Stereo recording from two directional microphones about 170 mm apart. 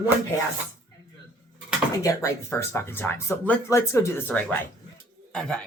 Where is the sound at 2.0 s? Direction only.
20° left (ahead or behind).